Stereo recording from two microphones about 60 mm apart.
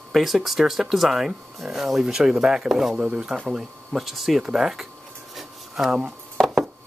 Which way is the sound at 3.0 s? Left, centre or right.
Centre.